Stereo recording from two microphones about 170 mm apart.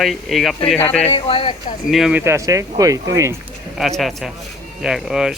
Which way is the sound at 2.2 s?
15° right (ahead or behind).